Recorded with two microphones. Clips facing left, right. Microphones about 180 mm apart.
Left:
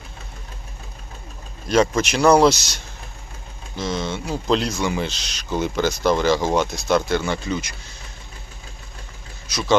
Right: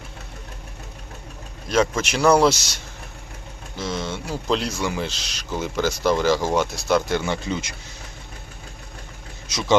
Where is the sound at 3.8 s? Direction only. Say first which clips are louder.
Left 2 dB; 5° right (ahead or behind).